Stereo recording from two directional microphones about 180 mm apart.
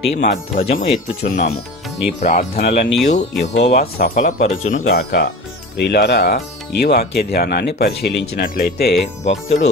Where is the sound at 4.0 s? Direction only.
50° left (ahead or behind).